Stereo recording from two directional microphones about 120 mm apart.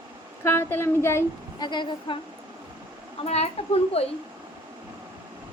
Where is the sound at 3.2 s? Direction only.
60° left (ahead or behind).